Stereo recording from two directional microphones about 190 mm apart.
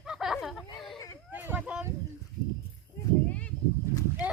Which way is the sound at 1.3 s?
10° right (ahead or behind).